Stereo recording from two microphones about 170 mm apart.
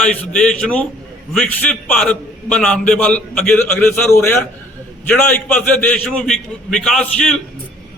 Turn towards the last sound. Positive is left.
turn(degrees=5)  # may be behind; listen again after turning